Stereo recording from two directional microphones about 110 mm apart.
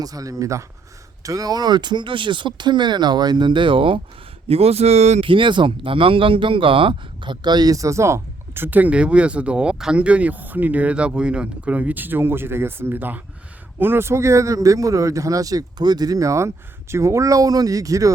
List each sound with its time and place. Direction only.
0.0 s speech: 35° right (ahead or behind); by 4.0 s 50° right (ahead or behind)
4.4 s speech: 65° right (ahead or behind); by 5.2 s 90° right
5.2 s a man's voice: 50° right (ahead or behind); by 18.1 s 30° right (ahead or behind)